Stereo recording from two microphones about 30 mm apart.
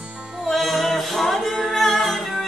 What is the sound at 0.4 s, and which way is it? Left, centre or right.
Music, centre.